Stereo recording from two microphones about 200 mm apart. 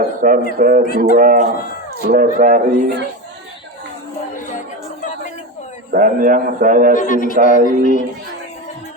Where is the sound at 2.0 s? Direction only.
45° right (ahead or behind).